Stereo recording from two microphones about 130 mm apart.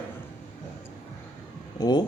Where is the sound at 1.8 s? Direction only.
35° left (ahead or behind).